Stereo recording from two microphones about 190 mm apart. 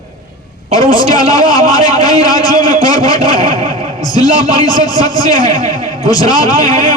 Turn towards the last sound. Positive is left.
turn(degrees=20)  # may be behind; listen again after turning